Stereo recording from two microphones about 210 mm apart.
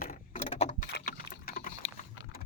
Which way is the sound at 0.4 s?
35° left (ahead or behind).